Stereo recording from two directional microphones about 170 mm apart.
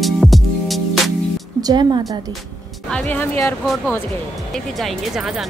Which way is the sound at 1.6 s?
25° right (ahead or behind).